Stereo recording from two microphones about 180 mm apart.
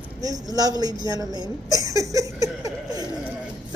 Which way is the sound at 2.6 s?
20° right (ahead or behind).